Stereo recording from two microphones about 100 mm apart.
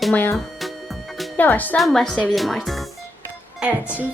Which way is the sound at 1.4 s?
20° left (ahead or behind).